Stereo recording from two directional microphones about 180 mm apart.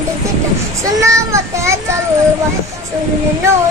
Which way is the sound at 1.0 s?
15° right (ahead or behind).